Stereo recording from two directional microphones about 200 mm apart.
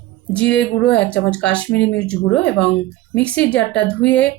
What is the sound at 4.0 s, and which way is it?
Speech, 60° left (ahead or behind).